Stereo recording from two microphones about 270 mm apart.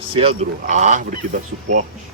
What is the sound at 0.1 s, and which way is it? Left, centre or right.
Speech, right.